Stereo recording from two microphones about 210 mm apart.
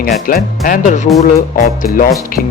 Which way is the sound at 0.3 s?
45° left (ahead or behind).